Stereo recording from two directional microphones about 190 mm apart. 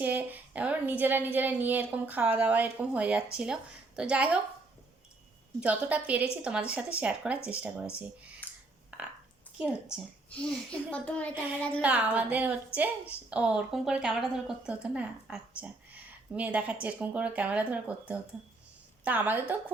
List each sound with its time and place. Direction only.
0.0 s a woman's voice: 10° right (ahead or behind)
5.5 s a woman's voice: 5° right (ahead or behind)
8.9 s a sound: 5° right (ahead or behind)
9.6 s a woman's voice: 5° right (ahead or behind)
11.8 s a woman's voice: 10° right (ahead or behind)